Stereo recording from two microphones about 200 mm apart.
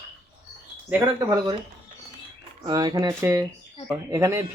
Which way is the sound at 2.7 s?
20° right (ahead or behind).